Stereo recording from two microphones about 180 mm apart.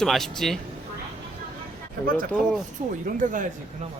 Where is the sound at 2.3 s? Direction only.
5° right (ahead or behind).